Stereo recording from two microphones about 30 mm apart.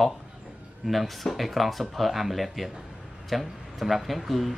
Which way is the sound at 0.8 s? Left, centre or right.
Centre.